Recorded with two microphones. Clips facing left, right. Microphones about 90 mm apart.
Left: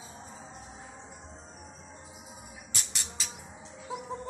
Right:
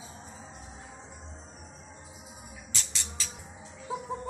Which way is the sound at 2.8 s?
15° left (ahead or behind).